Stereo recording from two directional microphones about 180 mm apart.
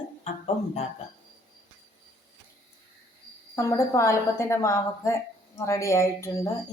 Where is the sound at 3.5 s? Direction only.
15° left (ahead or behind).